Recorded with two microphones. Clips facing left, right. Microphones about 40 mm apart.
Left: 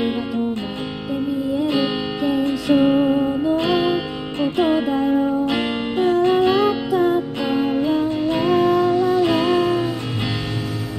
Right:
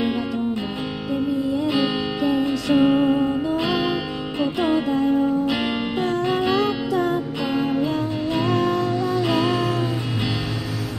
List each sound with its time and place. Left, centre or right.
1.1 s music: centre